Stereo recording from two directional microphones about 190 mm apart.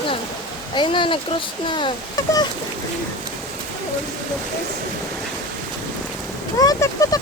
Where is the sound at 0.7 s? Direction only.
25° left (ahead or behind).